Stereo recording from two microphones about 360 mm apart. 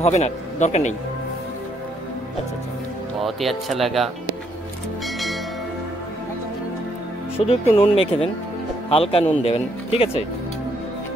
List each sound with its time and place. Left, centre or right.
0.0 s speech: centre
3.2 s speech: centre
5.0 s bell: centre
7.3 s speech: centre